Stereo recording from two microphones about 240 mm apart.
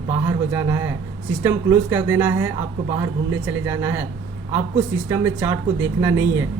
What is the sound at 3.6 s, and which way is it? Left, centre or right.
Speech, centre.